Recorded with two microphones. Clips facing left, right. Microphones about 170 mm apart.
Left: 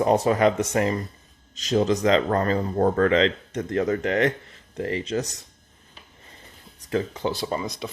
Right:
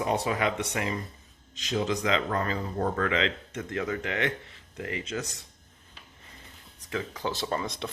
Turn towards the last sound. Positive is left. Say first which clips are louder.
# left 4 dB
turn(degrees=10)  # may be behind; listen again after turning